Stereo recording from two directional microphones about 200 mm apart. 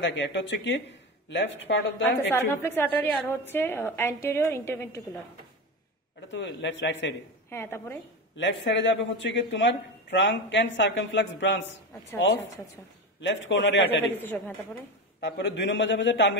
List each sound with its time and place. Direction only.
0.0 s a man's voice: 65° left (ahead or behind)
2.0 s a woman's voice: 10° left (ahead or behind)
6.3 s a man's voice: 65° left (ahead or behind)
7.4 s a woman's voice: 10° left (ahead or behind)
8.4 s a man's voice: 65° left (ahead or behind)
14.1 s a woman's voice: 10° left (ahead or behind)
15.1 s a man's voice: 55° left (ahead or behind)